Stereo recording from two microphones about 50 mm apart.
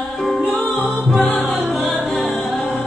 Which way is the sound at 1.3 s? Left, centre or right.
Centre.